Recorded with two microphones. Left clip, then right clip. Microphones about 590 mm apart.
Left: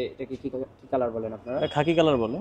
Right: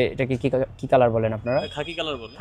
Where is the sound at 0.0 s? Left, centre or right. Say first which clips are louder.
Right 9 dB; right.